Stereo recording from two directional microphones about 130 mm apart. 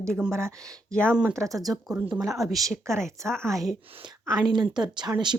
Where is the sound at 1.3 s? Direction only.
25° right (ahead or behind).